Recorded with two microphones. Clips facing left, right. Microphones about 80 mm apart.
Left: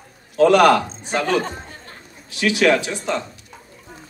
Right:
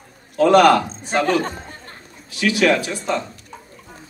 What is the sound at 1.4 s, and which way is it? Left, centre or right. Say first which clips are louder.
Chatter: right 1 dB; right.